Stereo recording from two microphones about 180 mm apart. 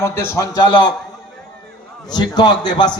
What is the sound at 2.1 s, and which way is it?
Speech, 25° left (ahead or behind).